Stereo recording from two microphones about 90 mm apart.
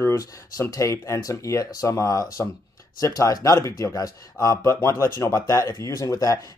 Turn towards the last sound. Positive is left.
turn(degrees=35)  # may be behind; listen again after turning